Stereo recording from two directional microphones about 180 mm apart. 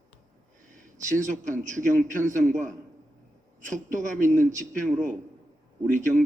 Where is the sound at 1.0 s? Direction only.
45° right (ahead or behind).